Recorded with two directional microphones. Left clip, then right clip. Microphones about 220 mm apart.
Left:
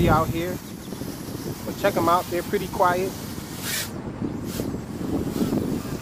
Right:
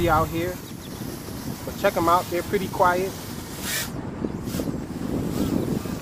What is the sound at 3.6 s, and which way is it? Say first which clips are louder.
Boat: right 1 dB; 15° left (ahead or behind).